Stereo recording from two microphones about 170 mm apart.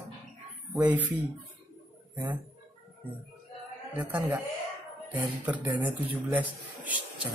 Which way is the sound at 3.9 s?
10° right (ahead or behind).